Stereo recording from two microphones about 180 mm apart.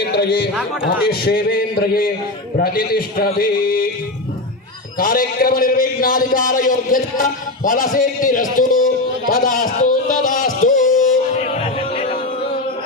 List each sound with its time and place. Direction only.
0.0 s a sound: 65° left (ahead or behind)
1.0 s a man's voice: 60° left (ahead or behind)
4.9 s a man's voice: 50° left (ahead or behind)
11.6 s music: 30° left (ahead or behind)